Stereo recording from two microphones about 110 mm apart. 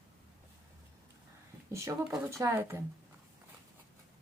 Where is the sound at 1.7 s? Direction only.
25° right (ahead or behind).